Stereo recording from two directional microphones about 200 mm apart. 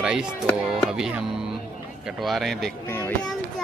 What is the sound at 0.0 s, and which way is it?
Music, 5° right (ahead or behind).